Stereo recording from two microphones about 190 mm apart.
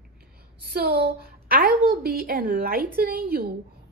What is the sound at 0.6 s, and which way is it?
A woman's voice, 55° right (ahead or behind).